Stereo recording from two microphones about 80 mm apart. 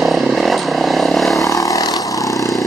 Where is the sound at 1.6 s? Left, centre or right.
Left.